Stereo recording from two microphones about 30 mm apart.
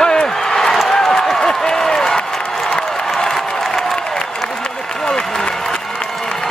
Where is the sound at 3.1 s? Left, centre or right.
Centre.